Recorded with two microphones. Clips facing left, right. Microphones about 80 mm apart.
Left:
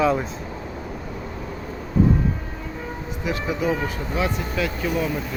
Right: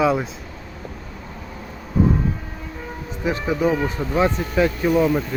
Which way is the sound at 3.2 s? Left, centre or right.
Right.